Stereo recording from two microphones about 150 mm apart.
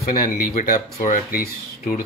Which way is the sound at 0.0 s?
70° left (ahead or behind).